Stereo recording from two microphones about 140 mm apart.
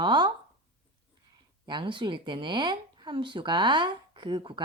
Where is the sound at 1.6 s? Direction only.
35° right (ahead or behind).